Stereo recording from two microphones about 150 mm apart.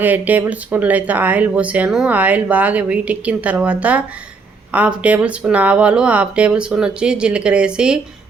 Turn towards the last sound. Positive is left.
turn(degrees=-5)  # may be behind; listen again after turning